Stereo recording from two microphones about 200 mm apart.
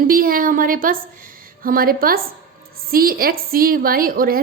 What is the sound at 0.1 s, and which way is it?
A woman's voice, 45° right (ahead or behind).